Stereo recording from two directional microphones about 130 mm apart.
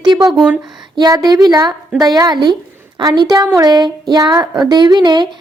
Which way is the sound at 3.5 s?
30° right (ahead or behind).